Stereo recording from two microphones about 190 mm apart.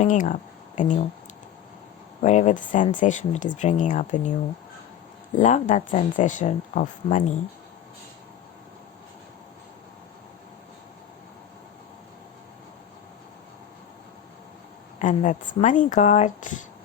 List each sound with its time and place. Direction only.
0.0 s speech: 40° left (ahead or behind)
2.2 s speech: 40° left (ahead or behind)
5.4 s speech: 40° left (ahead or behind)
14.9 s speech: 40° left (ahead or behind)